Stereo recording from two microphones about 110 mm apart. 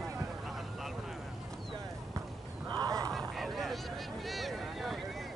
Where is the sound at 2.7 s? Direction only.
35° right (ahead or behind).